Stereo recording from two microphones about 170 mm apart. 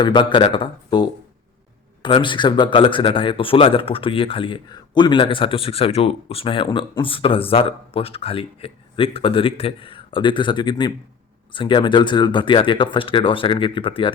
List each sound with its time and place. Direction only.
0.0 s a man's voice: 30° left (ahead or behind)